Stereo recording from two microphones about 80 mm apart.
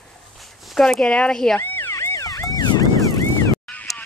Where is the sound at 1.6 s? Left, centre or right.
Left.